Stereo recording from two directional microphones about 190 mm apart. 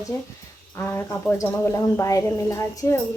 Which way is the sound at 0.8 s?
10° left (ahead or behind).